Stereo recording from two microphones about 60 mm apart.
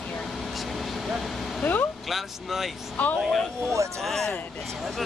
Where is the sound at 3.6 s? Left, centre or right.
Right.